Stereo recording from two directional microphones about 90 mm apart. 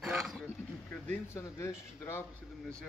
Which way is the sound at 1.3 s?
35° left (ahead or behind).